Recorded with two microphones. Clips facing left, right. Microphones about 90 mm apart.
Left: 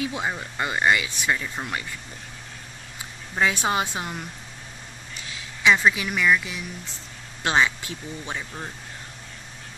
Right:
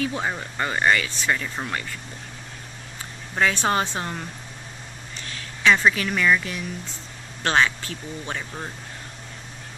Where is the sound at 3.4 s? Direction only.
10° left (ahead or behind).